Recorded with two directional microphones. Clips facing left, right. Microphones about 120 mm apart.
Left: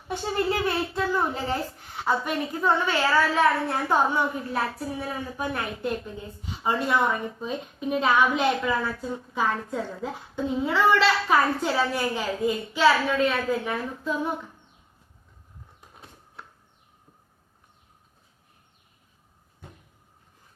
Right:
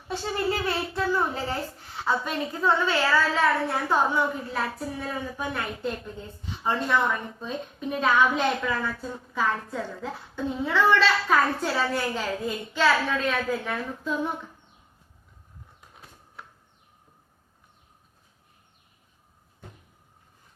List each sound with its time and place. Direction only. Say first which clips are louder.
0.1 s a woman's voice: left 1 dB; 15° left (ahead or behind); by 14.3 s centre (ahead or behind)